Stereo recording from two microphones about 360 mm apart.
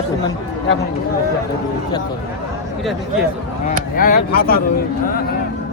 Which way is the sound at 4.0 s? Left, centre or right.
Left.